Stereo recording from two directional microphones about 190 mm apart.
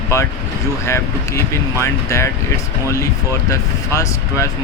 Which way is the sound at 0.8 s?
15° left (ahead or behind).